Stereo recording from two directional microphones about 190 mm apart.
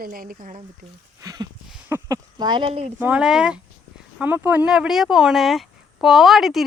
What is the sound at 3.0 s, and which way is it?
Speech, 5° right (ahead or behind).